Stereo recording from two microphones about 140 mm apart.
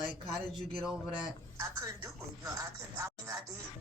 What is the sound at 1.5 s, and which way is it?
Speech, 25° right (ahead or behind).